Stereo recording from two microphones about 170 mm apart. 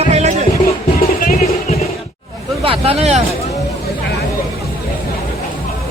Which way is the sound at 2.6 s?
35° right (ahead or behind).